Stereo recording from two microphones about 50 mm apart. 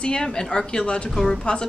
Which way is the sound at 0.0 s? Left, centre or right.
Centre.